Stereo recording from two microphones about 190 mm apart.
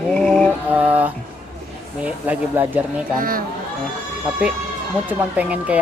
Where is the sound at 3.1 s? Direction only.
50° right (ahead or behind).